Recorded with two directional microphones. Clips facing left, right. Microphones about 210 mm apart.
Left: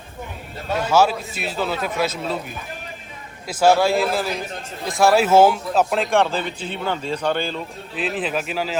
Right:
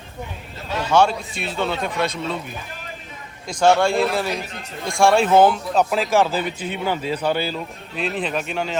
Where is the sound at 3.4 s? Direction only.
5° left (ahead or behind).